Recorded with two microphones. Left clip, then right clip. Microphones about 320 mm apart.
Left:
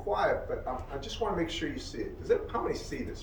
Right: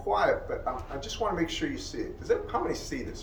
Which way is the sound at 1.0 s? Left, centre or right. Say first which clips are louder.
Right 3 dB; centre.